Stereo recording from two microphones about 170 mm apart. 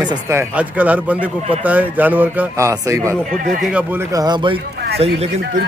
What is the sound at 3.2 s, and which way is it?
Speech, 45° right (ahead or behind).